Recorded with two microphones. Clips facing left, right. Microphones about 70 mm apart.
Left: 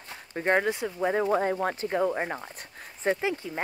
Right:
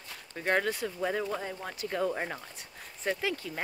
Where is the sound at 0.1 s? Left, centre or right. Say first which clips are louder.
Left 4 dB; left.